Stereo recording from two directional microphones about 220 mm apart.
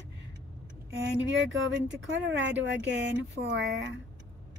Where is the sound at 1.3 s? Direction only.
60° right (ahead or behind).